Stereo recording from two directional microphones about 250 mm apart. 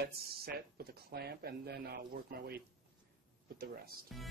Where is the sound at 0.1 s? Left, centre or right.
Right.